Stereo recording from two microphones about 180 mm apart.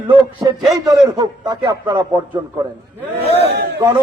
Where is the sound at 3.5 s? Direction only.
65° right (ahead or behind).